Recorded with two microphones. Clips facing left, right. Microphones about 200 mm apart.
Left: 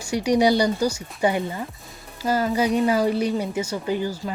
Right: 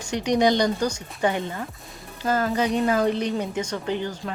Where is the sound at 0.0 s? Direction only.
10° left (ahead or behind).